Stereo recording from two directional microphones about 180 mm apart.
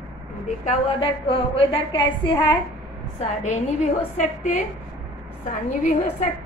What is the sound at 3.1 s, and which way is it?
A woman's voice, 40° left (ahead or behind).